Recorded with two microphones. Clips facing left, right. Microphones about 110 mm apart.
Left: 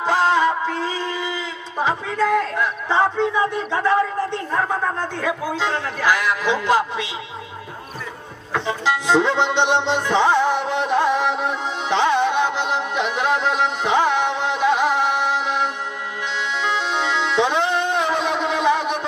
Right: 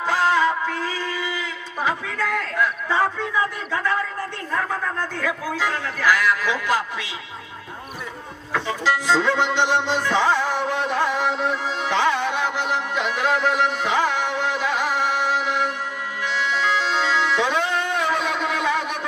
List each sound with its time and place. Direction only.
0.0 s speech: 20° left (ahead or behind)
8.5 s music: 20° left (ahead or behind)